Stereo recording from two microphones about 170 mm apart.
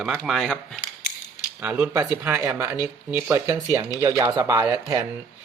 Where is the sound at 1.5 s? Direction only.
10° right (ahead or behind).